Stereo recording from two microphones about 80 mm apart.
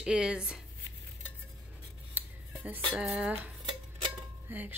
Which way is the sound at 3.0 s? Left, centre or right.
Centre.